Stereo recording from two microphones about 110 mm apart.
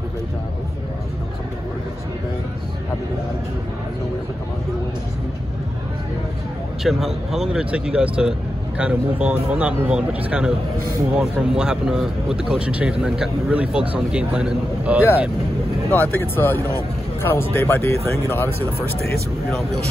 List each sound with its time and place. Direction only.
6.8 s speech: centre (ahead or behind)
15.9 s speech: 20° left (ahead or behind)